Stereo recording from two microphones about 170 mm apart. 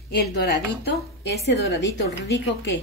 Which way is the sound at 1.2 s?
85° left.